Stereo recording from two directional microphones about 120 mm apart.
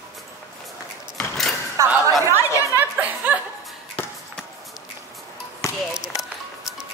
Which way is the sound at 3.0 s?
10° right (ahead or behind).